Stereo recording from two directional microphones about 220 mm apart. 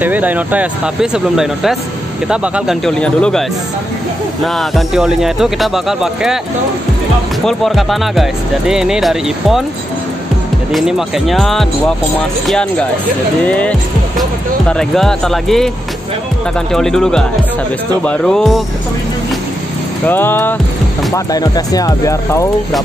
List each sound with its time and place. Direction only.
0.0 s speech: 5° right (ahead or behind)
4.6 s speech: centre (ahead or behind)
7.4 s speech: centre (ahead or behind)
10.7 s speech: centre (ahead or behind)
16.7 s speech: centre (ahead or behind)
20.1 s speech: 10° left (ahead or behind)